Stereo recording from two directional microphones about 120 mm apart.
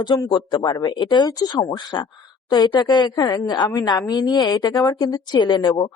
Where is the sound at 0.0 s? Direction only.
40° left (ahead or behind).